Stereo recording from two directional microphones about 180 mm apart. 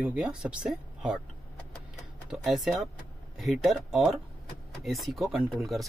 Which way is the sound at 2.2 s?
Centre (ahead or behind).